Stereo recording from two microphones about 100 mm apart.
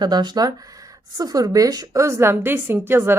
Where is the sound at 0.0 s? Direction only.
45° right (ahead or behind).